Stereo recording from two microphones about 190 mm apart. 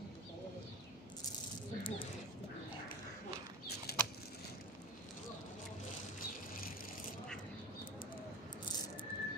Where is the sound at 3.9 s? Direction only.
55° left (ahead or behind).